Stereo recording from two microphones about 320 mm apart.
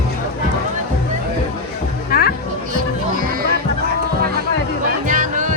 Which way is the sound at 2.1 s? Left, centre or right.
Left.